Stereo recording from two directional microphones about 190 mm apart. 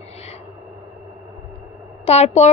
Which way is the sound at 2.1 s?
35° left (ahead or behind).